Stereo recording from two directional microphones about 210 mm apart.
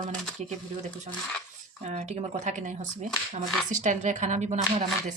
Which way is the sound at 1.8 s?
35° right (ahead or behind).